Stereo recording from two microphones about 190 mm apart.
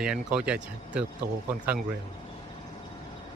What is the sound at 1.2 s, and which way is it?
Speech, 50° right (ahead or behind).